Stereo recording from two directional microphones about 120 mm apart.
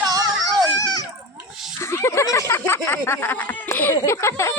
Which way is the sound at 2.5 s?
20° left (ahead or behind).